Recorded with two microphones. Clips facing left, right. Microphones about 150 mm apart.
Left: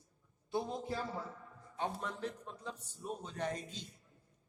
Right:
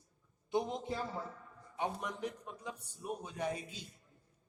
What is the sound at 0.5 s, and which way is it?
A man's voice, 20° right (ahead or behind).